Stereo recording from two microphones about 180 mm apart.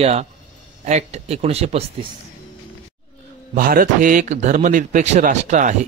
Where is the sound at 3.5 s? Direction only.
50° right (ahead or behind).